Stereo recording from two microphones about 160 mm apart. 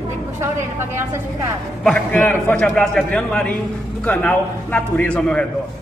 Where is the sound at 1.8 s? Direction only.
10° left (ahead or behind).